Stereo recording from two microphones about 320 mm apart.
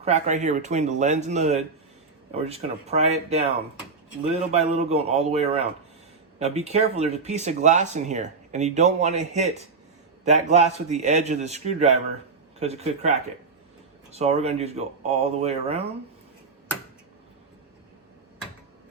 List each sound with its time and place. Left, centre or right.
0.0 s speech: right